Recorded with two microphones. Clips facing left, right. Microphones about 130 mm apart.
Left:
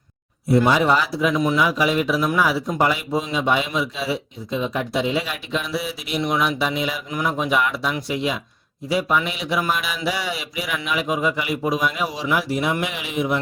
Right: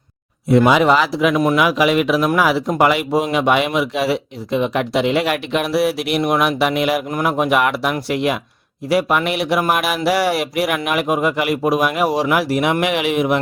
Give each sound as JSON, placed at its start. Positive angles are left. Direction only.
{"t": 0.4, "sound": "speech", "side_deg": -90}
{"t": 1.4, "sound": "speech", "side_deg": -65}